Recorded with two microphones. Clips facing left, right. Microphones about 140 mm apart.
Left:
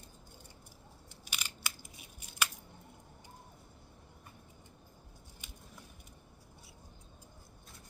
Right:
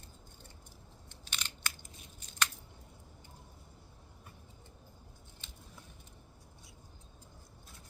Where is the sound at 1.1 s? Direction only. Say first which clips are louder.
Even; 10° left (ahead or behind).